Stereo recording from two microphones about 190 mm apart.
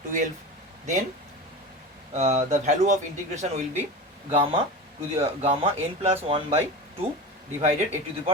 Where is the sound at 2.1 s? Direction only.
35° right (ahead or behind).